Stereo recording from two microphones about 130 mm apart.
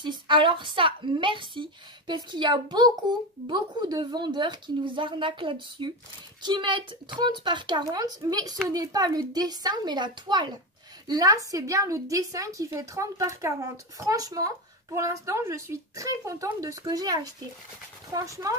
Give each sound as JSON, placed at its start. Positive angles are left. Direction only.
{"t": 0.0, "sound": "a woman's voice", "side_deg": -35}